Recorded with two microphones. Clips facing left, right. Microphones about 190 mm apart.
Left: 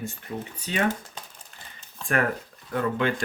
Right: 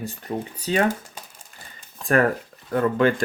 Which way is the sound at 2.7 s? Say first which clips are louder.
Right 6 dB; 45° right (ahead or behind).